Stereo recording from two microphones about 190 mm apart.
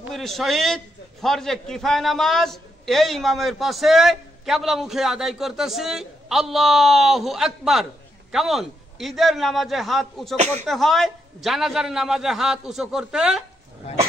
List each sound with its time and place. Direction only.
0.1 s a man's voice: centre (ahead or behind)
10.3 s speech: 35° right (ahead or behind)
10.7 s a man's voice: centre (ahead or behind)